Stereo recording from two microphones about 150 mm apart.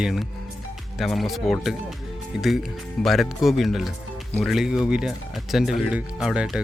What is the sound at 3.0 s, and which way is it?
Speech, centre (ahead or behind).